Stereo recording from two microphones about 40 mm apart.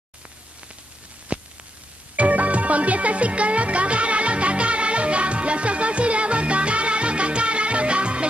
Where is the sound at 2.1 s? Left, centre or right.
Right.